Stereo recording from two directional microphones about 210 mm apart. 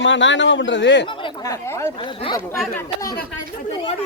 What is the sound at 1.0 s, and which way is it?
Chatter, 25° left (ahead or behind).